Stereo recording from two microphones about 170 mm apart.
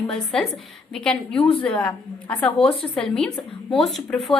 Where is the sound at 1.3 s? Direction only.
30° left (ahead or behind).